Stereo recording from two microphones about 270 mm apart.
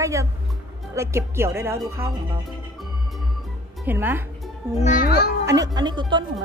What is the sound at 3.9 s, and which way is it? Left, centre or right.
Speech, centre.